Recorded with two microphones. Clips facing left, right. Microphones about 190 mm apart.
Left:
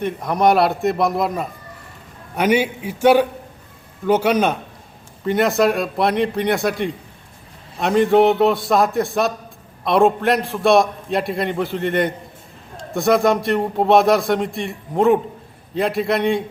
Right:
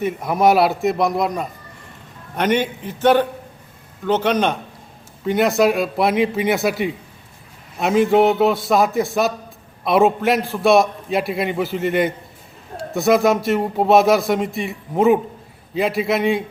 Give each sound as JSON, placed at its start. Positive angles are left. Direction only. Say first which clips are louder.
{"t": 0.0, "sound": "a man's voice", "louder": "right 1 dB", "side_deg": -5}